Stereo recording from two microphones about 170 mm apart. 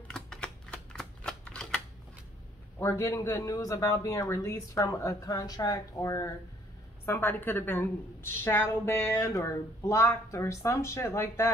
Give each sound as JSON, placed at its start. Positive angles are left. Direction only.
{"t": 0.1, "sound": "typewriter", "side_deg": 5}
{"t": 2.8, "sound": "a man's voice", "side_deg": 15}